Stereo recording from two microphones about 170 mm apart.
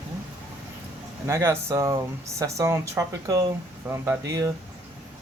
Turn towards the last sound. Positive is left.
turn(degrees=-15)  # may be behind; listen again after turning